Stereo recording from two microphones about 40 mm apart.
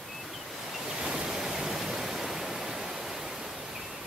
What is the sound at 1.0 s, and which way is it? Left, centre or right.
Waterfall, centre.